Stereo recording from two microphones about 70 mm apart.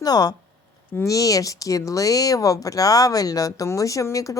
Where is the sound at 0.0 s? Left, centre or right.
Left.